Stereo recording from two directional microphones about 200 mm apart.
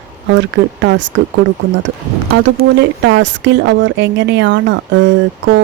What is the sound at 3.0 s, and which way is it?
Speech, 65° right (ahead or behind).